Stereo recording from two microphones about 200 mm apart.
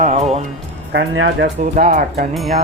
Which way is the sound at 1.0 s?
60° right (ahead or behind).